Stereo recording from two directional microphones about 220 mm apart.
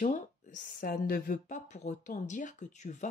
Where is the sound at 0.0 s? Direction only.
35° left (ahead or behind).